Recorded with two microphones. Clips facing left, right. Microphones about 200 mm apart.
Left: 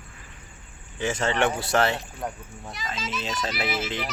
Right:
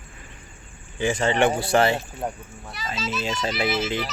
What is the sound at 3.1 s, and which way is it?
Speech, 10° right (ahead or behind).